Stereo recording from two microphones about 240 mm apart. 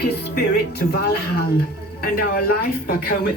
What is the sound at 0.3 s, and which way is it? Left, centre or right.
Speech, left.